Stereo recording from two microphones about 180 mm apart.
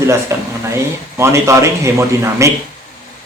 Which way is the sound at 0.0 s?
15° right (ahead or behind).